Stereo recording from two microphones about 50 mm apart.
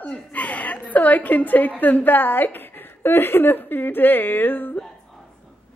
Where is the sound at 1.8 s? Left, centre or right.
Left.